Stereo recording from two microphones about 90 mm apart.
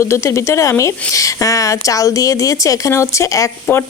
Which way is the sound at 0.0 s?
35° left (ahead or behind).